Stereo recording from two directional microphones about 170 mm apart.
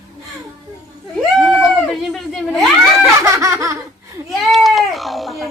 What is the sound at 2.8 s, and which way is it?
Laughter, 15° right (ahead or behind).